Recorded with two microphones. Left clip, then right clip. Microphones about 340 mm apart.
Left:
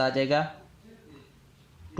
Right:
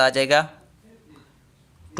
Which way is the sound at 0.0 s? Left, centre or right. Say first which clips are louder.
Right 7 dB; right.